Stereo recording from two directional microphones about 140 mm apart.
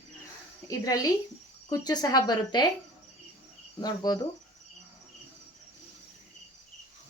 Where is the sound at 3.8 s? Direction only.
30° left (ahead or behind).